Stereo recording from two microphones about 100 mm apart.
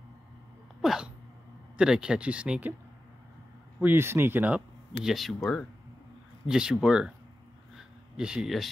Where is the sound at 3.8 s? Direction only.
25° right (ahead or behind).